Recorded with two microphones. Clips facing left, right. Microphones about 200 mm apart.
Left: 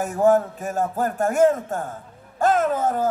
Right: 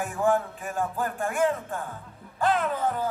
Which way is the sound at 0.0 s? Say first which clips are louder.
Left 7 dB; 40° left (ahead or behind).